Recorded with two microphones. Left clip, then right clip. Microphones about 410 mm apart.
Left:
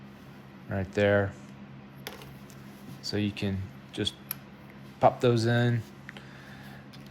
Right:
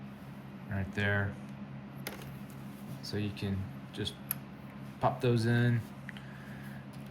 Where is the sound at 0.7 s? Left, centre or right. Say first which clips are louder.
Left 9 dB; centre.